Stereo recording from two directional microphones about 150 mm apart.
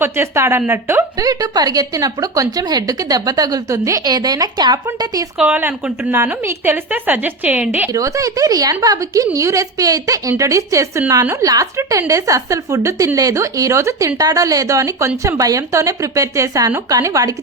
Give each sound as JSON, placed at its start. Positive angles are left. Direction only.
{"t": 0.0, "sound": "a woman's voice", "side_deg": -15}
{"t": 5.4, "sound": "a woman's voice", "side_deg": -10}
{"t": 7.9, "sound": "a woman's voice", "side_deg": -20}